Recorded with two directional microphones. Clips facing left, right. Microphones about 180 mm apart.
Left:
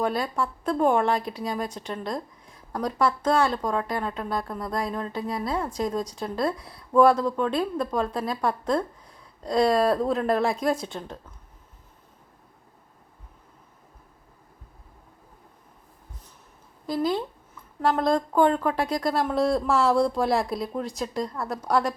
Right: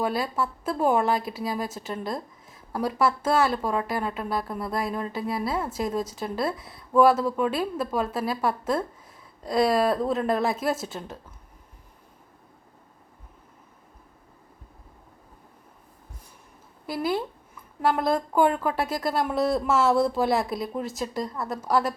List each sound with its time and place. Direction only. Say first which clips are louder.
0.0 s speech: even; 5° right (ahead or behind)
16.8 s speech: left 1 dB; 5° right (ahead or behind)